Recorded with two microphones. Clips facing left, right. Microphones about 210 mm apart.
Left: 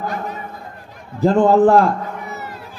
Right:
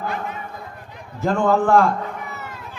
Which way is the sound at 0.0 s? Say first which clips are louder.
Left 2 dB; 40° left (ahead or behind).